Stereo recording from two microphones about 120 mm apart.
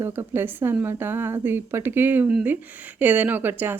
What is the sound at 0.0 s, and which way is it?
A woman's voice, 20° right (ahead or behind).